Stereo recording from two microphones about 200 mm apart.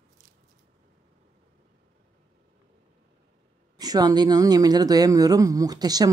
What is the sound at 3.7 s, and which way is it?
Speech, 20° right (ahead or behind).